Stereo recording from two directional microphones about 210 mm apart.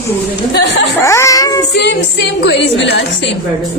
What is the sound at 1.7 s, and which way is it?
A woman's voice, 55° left (ahead or behind).